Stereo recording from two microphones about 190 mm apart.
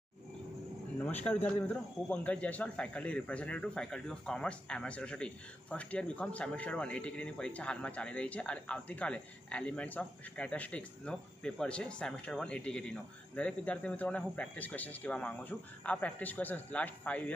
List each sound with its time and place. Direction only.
0.9 s speech: 10° left (ahead or behind)